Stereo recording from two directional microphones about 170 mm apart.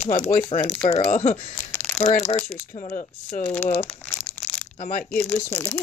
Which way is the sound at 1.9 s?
40° left (ahead or behind).